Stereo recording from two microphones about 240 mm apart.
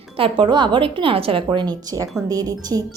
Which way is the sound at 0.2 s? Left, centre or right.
Right.